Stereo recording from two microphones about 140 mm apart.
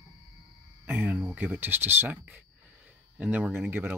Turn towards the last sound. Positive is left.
turn(degrees=-15)  # may be behind; listen again after turning